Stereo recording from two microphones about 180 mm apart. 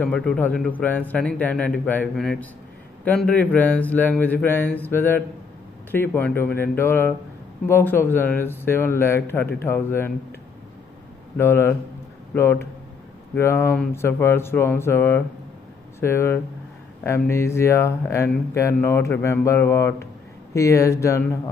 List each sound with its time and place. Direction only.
0.0 s speech: 5° left (ahead or behind)
11.3 s speech: 15° left (ahead or behind)